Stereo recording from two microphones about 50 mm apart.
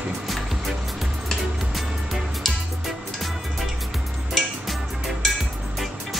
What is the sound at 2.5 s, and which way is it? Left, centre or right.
Music, centre.